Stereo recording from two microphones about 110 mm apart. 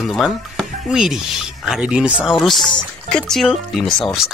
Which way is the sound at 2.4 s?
Centre (ahead or behind).